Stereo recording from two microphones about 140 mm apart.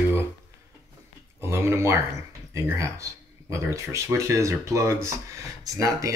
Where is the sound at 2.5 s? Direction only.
20° right (ahead or behind).